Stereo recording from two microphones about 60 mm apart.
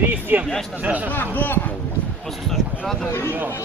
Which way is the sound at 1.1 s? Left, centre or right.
Left.